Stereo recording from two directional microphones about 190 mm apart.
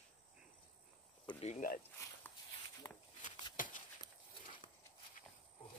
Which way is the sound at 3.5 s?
45° left (ahead or behind).